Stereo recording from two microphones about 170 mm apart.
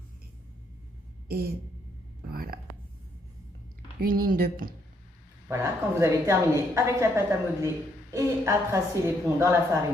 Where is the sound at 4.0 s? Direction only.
60° right (ahead or behind).